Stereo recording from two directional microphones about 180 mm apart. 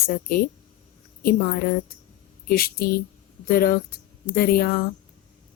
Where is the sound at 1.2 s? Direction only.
55° left (ahead or behind).